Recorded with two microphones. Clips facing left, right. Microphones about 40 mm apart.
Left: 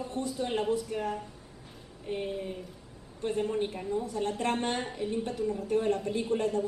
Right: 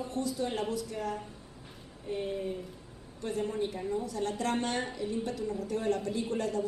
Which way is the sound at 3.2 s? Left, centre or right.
Left.